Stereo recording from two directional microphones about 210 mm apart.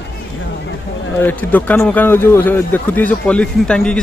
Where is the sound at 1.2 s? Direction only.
10° left (ahead or behind).